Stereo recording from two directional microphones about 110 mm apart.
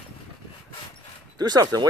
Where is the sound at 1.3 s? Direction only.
35° right (ahead or behind).